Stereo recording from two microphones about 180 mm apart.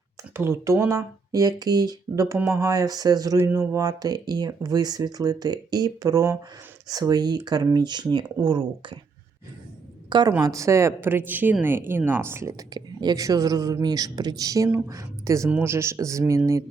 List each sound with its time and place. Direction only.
0.3 s speech: 15° right (ahead or behind)
10.1 s a woman's voice: 25° right (ahead or behind)